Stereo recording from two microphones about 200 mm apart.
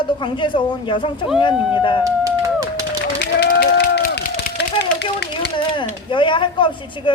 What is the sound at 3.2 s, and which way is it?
Run, 55° left (ahead or behind).